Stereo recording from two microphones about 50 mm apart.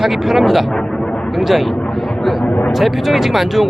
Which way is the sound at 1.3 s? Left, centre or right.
Centre.